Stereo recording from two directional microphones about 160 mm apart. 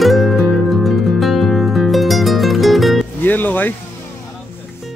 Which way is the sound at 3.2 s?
10° left (ahead or behind).